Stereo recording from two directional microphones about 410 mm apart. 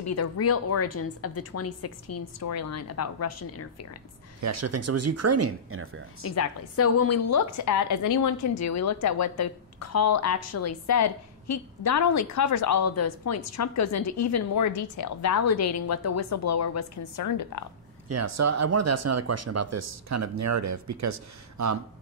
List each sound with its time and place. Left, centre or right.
0.0 s a woman's voice: left
4.4 s speech: right
6.2 s a woman's voice: left
18.0 s speech: right